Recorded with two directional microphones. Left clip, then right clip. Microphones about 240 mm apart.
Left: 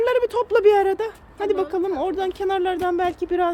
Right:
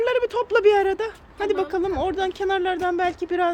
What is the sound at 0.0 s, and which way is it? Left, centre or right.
Speech, centre.